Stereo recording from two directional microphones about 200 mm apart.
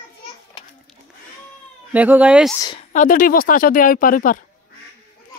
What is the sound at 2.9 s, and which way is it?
Speech, 40° left (ahead or behind).